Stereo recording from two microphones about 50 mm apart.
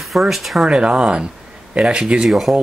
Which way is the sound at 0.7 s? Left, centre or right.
Right.